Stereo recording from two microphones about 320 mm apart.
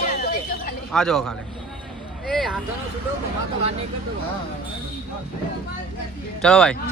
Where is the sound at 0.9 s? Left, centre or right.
Centre.